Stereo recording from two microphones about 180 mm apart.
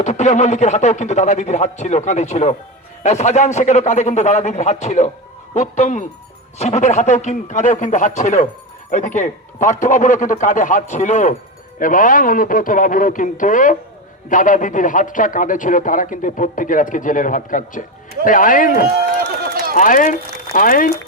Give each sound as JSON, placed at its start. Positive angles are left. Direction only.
{"t": 0.0, "sound": "a man's voice", "side_deg": 40}
{"t": 18.9, "sound": "run", "side_deg": -60}
{"t": 19.7, "sound": "speech", "side_deg": 45}